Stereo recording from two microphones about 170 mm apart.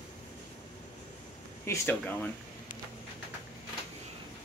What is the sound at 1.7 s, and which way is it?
Speech, 10° left (ahead or behind).